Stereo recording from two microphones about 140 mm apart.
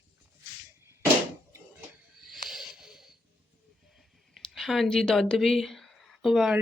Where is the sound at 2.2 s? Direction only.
Centre (ahead or behind).